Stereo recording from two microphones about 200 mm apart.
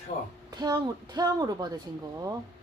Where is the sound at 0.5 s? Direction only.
20° right (ahead or behind).